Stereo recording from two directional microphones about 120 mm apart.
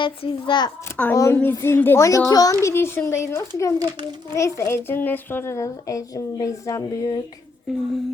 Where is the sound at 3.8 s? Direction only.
35° right (ahead or behind).